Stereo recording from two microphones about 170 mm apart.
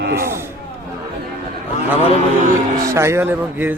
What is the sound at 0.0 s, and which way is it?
Speech, 75° right (ahead or behind).